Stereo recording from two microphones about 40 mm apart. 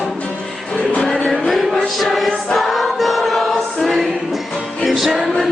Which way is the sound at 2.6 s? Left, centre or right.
Centre.